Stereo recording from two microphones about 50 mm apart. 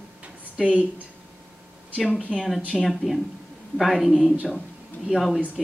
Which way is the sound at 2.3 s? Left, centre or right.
Centre.